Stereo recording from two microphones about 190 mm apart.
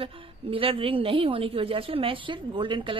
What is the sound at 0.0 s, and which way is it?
A woman's voice, 30° right (ahead or behind).